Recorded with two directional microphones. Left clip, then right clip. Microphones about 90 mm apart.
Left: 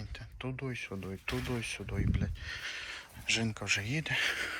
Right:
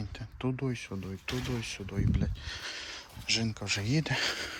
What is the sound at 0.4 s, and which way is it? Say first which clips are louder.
Speech: right 4 dB; 45° right (ahead or behind).